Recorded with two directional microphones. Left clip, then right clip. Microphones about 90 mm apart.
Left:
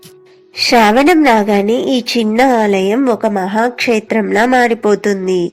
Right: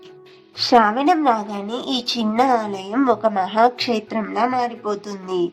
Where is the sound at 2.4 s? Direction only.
65° left (ahead or behind).